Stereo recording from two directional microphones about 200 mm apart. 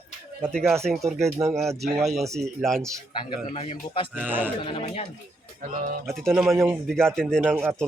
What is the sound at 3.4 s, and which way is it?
Speech, 30° left (ahead or behind).